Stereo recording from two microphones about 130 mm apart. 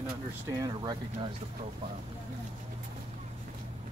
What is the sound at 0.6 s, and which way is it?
Speech, 30° right (ahead or behind).